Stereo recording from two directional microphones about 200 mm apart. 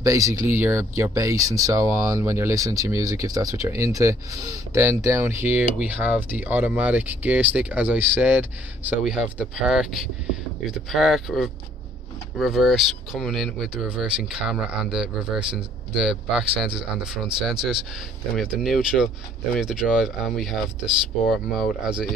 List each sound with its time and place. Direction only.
0.0 s speech: 15° right (ahead or behind)